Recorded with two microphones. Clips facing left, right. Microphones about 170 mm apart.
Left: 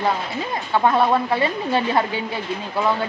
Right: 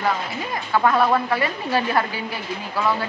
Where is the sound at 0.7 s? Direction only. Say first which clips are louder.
Left 1 dB; 20° left (ahead or behind).